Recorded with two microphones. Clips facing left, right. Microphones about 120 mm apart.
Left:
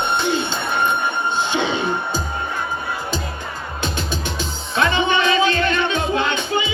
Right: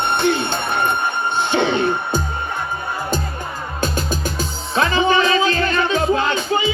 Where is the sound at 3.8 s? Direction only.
45° right (ahead or behind).